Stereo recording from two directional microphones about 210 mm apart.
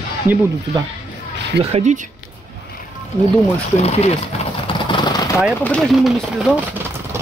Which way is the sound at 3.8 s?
30° left (ahead or behind).